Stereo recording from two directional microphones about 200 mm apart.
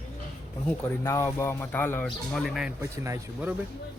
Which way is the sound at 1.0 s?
15° left (ahead or behind).